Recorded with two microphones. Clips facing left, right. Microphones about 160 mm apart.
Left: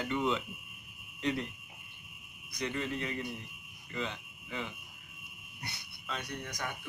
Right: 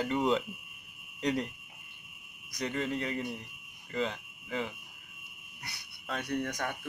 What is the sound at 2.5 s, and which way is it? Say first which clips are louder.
Speech: right 2 dB; 35° right (ahead or behind).